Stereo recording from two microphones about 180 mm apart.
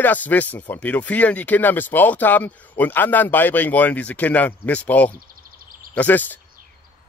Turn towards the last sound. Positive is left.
turn(degrees=10)  # may be behind; listen again after turning